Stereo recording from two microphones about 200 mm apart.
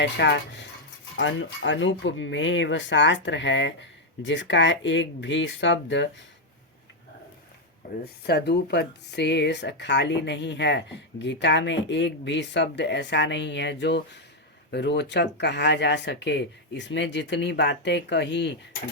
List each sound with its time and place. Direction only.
0.0 s speech: 60° left (ahead or behind)
7.8 s speech: 45° left (ahead or behind)